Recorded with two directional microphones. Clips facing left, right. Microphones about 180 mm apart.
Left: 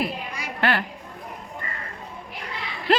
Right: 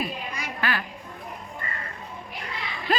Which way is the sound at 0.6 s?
65° left (ahead or behind).